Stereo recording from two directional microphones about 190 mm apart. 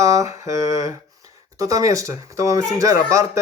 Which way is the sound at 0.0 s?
15° right (ahead or behind).